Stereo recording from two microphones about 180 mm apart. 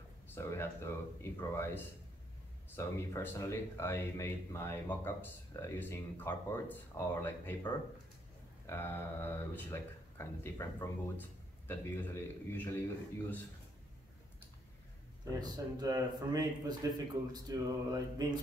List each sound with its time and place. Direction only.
0.3 s speech: 15° left (ahead or behind)
8.6 s speech: 15° left (ahead or behind)
15.4 s speech: 20° right (ahead or behind)